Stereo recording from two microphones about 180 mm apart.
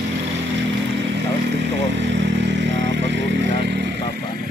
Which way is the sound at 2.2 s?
80° right.